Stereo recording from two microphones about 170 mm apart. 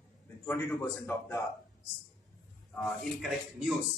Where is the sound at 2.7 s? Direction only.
5° left (ahead or behind).